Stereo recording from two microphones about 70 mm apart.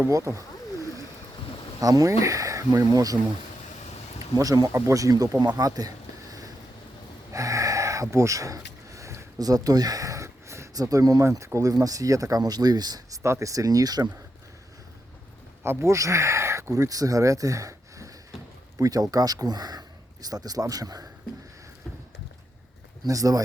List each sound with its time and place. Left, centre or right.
0.1 s speech: right
1.8 s a man's voice: right
4.4 s a man's voice: right
5.5 s a sound: right
9.4 s a sound: right
10.8 s speech: right
11.7 s a man's voice: right
13.2 s a man's voice: right
15.6 s speech: right
18.8 s a man's voice: right
23.0 s a man's voice: right